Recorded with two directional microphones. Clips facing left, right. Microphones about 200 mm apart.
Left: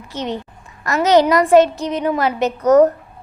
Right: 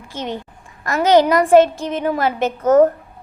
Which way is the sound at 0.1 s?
50° right (ahead or behind).